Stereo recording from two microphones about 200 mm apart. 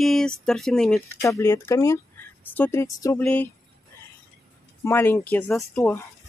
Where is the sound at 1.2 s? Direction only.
15° left (ahead or behind).